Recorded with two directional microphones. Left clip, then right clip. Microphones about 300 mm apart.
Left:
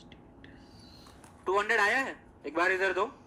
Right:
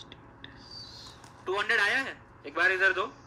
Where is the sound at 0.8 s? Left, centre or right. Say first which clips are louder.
Right 7 dB; centre.